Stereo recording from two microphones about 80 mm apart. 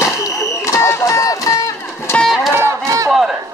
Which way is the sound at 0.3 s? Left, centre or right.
Left.